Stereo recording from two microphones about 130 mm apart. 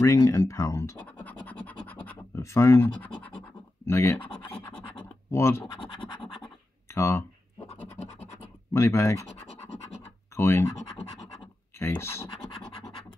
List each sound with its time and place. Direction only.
0.0 s speech: 25° left (ahead or behind)
1.0 s scratch: 10° left (ahead or behind)
3.9 s speech: 20° left (ahead or behind)
4.2 s scratch: 40° left (ahead or behind)
5.3 s speech: 20° left (ahead or behind)
6.9 s speech: 20° left (ahead or behind)
7.7 s scratch: 15° left (ahead or behind)
8.7 s speech: 20° left (ahead or behind)
10.3 s speech: 20° left (ahead or behind)
11.8 s speech: 20° left (ahead or behind)